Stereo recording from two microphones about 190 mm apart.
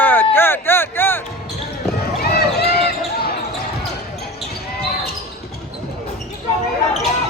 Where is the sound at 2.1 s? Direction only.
55° left (ahead or behind).